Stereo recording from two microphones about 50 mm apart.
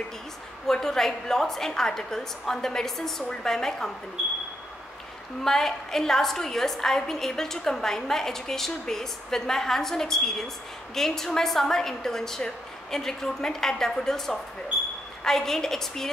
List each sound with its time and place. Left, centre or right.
0.7 s a woman's voice: centre
5.4 s a woman's voice: centre